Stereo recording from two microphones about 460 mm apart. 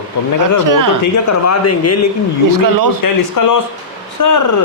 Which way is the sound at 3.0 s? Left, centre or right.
Left.